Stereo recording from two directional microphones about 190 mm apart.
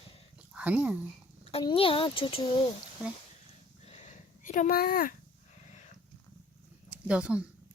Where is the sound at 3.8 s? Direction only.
40° left (ahead or behind).